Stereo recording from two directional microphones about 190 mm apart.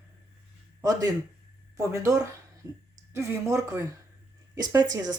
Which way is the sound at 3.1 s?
15° right (ahead or behind).